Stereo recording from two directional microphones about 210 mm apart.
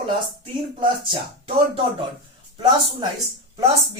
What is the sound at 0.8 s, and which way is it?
Speech, 25° right (ahead or behind).